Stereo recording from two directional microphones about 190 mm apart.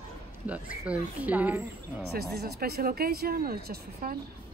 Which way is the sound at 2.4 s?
55° right (ahead or behind).